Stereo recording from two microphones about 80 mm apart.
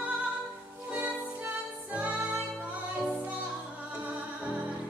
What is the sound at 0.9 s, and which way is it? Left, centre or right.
Music, centre.